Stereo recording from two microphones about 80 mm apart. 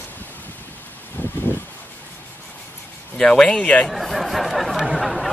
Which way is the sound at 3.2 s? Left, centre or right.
Centre.